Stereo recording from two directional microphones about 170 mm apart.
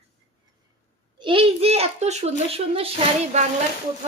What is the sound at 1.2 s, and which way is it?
Speech, 30° right (ahead or behind).